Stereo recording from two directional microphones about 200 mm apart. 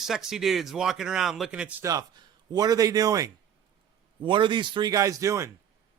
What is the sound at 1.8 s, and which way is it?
A man's voice, 15° right (ahead or behind).